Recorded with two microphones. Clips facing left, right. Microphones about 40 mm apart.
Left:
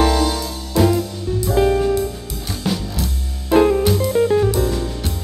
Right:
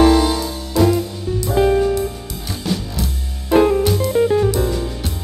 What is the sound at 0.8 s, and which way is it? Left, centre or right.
Music, centre.